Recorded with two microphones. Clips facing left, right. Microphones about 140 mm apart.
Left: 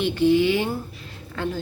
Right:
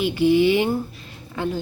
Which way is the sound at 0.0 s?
10° right (ahead or behind).